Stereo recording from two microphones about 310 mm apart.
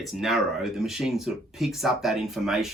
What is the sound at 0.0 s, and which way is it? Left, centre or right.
Speech, centre.